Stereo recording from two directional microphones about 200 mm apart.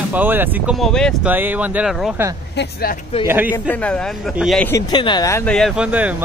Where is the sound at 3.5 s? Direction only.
5° left (ahead or behind).